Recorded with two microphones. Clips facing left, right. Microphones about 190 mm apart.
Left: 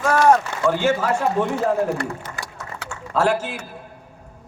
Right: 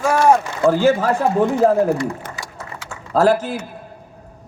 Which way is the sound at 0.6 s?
35° right (ahead or behind).